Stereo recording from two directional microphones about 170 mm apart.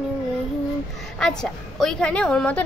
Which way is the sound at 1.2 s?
5° left (ahead or behind).